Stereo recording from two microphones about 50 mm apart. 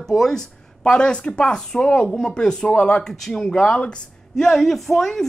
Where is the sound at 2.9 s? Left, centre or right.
Centre.